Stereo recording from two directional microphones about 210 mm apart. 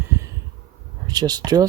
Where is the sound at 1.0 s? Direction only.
20° right (ahead or behind).